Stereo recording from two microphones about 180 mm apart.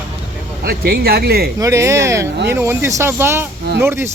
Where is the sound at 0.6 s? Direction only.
60° right (ahead or behind).